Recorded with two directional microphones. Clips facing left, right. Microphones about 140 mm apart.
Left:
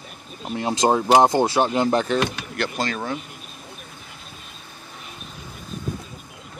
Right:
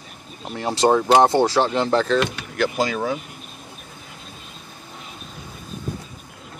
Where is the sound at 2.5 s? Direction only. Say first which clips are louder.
Right 4 dB; 5° right (ahead or behind).